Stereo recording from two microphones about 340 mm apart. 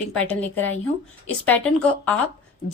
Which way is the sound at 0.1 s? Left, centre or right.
Centre.